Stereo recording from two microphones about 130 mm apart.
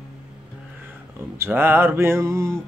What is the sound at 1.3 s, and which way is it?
Music, 20° right (ahead or behind).